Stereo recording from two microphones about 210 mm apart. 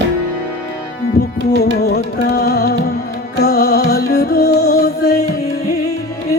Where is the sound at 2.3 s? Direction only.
50° left (ahead or behind).